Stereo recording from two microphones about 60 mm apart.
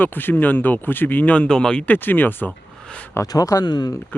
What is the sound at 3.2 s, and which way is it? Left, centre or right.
Speech, left.